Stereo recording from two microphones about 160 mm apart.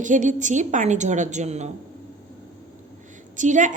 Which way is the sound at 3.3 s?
50° right (ahead or behind).